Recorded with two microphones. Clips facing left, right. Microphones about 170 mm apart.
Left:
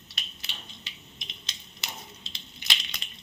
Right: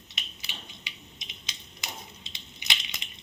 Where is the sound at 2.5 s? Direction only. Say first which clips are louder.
Even; 15° right (ahead or behind).